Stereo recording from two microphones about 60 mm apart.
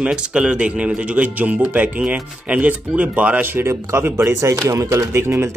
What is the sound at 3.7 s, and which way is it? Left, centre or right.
Speech, right.